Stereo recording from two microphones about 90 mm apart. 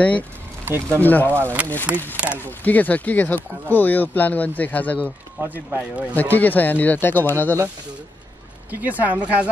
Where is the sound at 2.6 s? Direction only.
20° left (ahead or behind).